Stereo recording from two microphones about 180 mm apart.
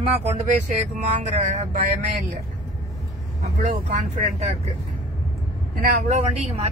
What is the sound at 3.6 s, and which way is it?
Speech, 45° right (ahead or behind).